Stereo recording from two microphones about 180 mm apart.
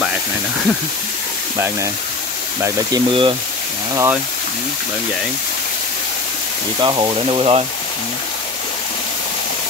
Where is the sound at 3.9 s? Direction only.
15° right (ahead or behind).